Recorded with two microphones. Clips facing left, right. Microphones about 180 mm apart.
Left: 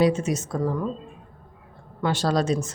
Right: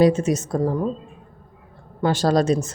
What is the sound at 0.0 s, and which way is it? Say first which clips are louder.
Speech: right 4 dB; 40° right (ahead or behind).